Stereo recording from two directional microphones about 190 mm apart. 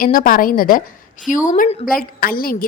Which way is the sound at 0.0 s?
45° left (ahead or behind).